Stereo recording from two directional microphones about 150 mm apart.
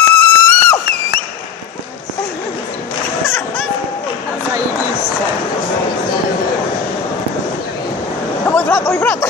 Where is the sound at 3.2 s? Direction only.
15° left (ahead or behind).